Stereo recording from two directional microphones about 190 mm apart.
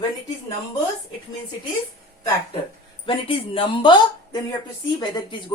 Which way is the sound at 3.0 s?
25° left (ahead or behind).